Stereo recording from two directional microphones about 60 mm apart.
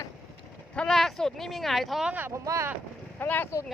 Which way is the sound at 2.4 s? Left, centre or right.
Right.